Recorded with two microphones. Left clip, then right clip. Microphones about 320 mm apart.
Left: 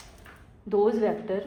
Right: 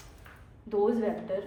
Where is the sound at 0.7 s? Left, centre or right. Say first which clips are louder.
Left 4 dB; left.